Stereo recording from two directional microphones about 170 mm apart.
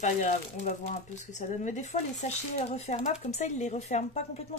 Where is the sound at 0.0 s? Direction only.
45° left (ahead or behind).